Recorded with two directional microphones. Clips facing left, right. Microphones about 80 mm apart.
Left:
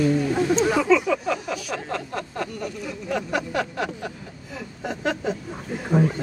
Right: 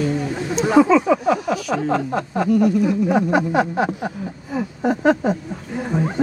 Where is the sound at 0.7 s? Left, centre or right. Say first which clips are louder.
Right 6 dB; right.